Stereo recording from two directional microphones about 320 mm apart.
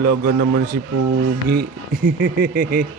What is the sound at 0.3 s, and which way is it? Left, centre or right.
Speech, right.